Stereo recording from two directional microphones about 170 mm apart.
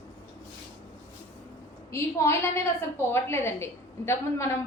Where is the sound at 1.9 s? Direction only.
15° left (ahead or behind).